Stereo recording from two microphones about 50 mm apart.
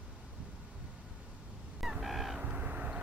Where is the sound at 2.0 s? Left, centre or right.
Centre.